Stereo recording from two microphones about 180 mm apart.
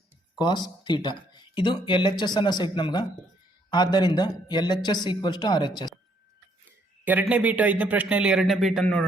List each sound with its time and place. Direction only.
0.3 s speech: 25° left (ahead or behind)
7.0 s speech: 10° right (ahead or behind)